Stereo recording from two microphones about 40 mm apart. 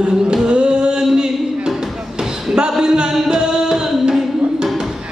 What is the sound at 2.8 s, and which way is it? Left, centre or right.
Music, centre.